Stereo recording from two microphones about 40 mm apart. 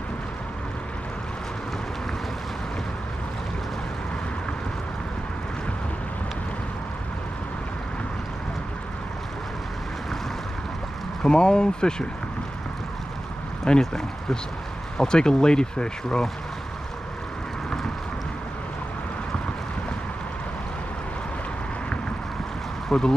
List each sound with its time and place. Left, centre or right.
11.2 s speech: left
13.7 s speech: centre
22.8 s speech: centre